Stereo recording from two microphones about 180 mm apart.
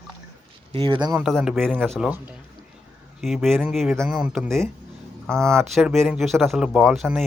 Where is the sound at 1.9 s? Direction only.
10° right (ahead or behind).